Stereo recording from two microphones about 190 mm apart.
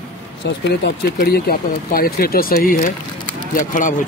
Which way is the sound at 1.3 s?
50° left (ahead or behind).